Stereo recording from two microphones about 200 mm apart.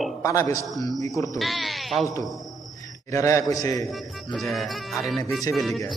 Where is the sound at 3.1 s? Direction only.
15° left (ahead or behind).